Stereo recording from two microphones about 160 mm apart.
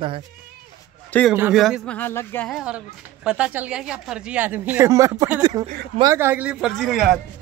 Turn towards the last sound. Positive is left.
turn(degrees=0)  # may be behind; listen again after turning